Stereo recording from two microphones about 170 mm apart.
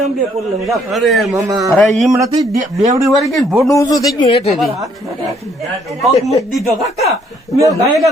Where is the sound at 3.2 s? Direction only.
Centre (ahead or behind).